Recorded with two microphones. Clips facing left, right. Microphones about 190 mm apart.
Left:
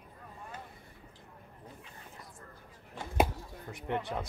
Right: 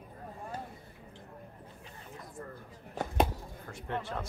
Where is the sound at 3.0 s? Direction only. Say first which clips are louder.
Right 7 dB; 40° right (ahead or behind).